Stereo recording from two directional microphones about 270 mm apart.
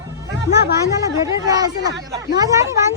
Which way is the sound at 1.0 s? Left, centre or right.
Centre.